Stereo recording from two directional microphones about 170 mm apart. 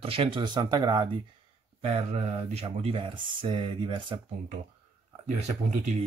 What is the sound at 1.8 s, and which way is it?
Speech, 40° right (ahead or behind).